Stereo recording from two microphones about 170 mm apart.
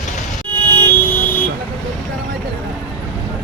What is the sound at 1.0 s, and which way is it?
Vehicle, 10° left (ahead or behind).